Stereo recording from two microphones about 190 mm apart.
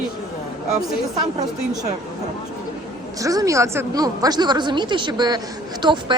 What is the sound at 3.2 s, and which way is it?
A woman's voice, 15° right (ahead or behind).